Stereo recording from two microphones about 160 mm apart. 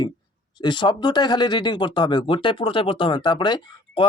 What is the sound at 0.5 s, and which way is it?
Speech, 30° left (ahead or behind).